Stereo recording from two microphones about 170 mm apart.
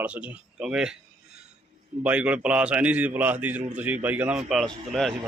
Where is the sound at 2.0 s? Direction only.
10° right (ahead or behind).